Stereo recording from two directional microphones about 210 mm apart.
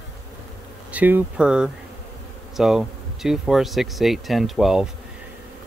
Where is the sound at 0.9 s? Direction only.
5° right (ahead or behind).